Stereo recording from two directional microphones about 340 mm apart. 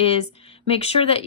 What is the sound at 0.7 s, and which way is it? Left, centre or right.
Speech, centre.